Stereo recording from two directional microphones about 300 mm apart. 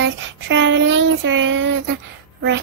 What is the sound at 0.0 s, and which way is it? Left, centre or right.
Child singing, right.